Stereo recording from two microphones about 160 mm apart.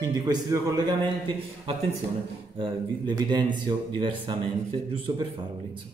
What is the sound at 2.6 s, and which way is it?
Speech, 25° right (ahead or behind).